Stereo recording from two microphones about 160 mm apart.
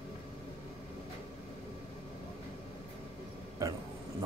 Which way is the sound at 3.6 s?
20° right (ahead or behind).